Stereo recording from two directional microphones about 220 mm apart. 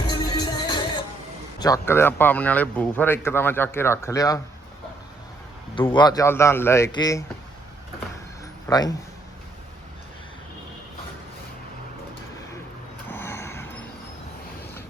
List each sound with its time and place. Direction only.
0.1 s music: 20° left (ahead or behind)
1.5 s speech: 15° left (ahead or behind)
5.9 s speech: 20° left (ahead or behind)
8.7 s speech: 15° left (ahead or behind)
13.1 s a sound: 10° left (ahead or behind)